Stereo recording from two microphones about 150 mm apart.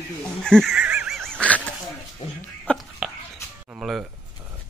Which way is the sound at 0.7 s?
5° right (ahead or behind).